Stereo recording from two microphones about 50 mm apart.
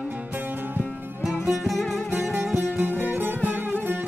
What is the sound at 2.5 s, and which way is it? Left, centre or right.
Music, right.